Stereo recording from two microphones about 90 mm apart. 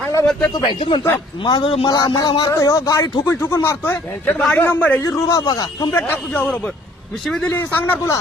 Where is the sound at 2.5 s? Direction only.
35° left (ahead or behind); by 5.0 s 20° left (ahead or behind).